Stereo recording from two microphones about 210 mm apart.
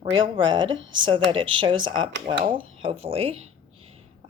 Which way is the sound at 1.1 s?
25° right (ahead or behind).